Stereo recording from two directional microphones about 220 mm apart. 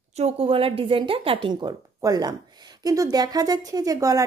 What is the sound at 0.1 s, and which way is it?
Speech, 25° right (ahead or behind).